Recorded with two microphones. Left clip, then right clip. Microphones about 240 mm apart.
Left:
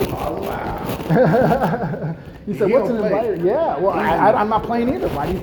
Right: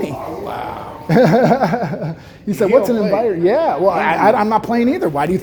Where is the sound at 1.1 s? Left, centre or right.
Right.